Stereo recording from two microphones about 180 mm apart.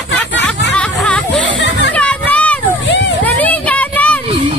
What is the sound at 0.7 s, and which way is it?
Music, 5° left (ahead or behind).